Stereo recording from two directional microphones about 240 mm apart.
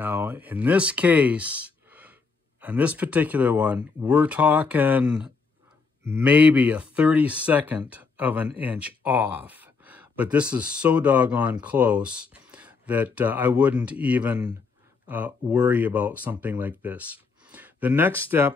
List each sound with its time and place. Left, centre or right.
0.0 s speech: centre